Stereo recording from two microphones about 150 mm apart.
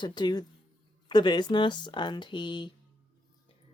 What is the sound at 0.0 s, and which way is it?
Speech, 30° left (ahead or behind).